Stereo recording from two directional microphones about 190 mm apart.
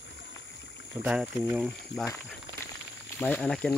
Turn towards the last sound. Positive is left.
turn(degrees=5)  # may be behind; listen again after turning